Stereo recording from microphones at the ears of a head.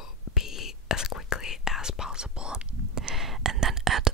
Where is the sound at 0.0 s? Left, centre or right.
Left.